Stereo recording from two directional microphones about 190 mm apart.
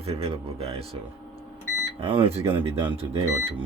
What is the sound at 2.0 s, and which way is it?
Speech, 30° right (ahead or behind).